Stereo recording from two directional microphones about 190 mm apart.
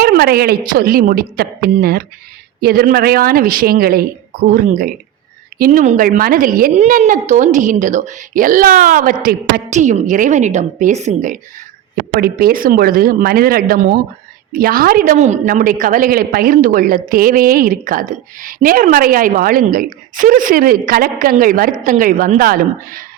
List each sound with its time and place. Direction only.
0.0 s a woman's voice: 55° right (ahead or behind)
12.1 s a woman's voice: 50° right (ahead or behind)